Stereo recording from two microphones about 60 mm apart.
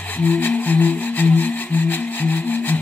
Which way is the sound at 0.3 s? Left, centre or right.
Left.